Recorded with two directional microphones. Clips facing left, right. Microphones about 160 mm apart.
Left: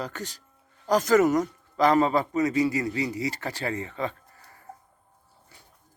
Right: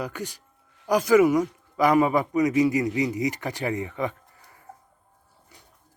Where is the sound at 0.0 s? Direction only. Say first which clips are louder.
Right 2 dB; 10° right (ahead or behind).